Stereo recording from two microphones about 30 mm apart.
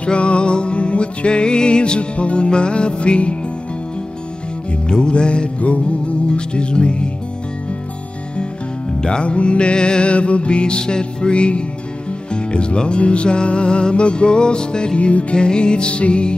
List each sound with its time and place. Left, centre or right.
0.0 s music: left
4.8 s music: left
9.0 s music: left
15.0 s music: left
15.3 s music: left